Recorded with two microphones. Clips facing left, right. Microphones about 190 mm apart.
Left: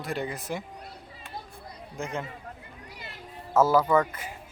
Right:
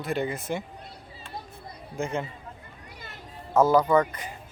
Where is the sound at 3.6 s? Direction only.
5° left (ahead or behind).